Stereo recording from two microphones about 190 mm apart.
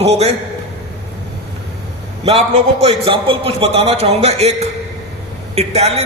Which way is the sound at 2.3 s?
30° right (ahead or behind).